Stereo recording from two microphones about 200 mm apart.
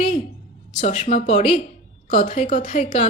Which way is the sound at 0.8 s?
35° left (ahead or behind).